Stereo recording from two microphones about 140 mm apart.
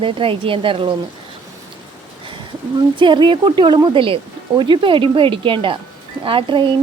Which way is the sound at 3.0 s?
35° right (ahead or behind).